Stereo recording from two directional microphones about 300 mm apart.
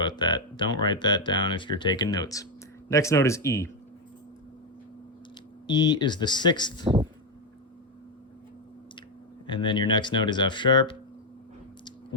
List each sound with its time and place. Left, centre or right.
0.0 s speech: centre
5.6 s speech: centre
6.8 s speech: centre
9.5 s speech: centre